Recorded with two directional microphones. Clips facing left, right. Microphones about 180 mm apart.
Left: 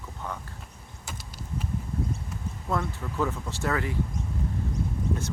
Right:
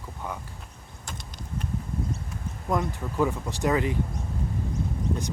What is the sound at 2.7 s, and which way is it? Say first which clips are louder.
Speech: right 3 dB; 15° right (ahead or behind).